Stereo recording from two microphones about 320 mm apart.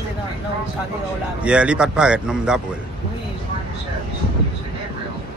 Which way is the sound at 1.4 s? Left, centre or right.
Centre.